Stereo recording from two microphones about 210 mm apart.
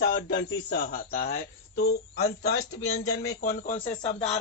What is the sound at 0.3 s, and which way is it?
Speech, 50° left (ahead or behind).